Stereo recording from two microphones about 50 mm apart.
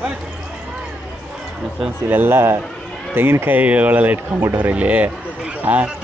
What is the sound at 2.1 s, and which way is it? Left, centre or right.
Speech, right.